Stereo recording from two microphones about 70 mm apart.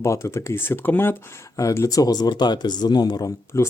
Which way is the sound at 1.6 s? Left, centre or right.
Left.